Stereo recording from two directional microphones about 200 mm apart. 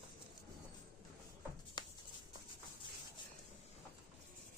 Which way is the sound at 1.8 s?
20° left (ahead or behind).